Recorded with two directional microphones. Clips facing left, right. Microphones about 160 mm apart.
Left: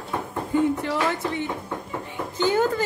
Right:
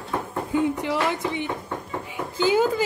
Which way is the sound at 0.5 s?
15° right (ahead or behind).